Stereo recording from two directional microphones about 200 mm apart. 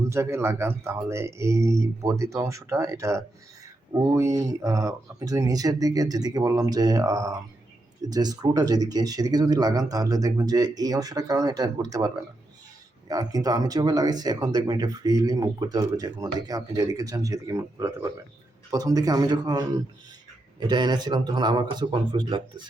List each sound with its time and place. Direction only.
0.0 s speech: 15° right (ahead or behind)